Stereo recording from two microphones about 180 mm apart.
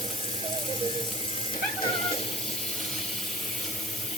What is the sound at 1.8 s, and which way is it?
Cat, 35° left (ahead or behind).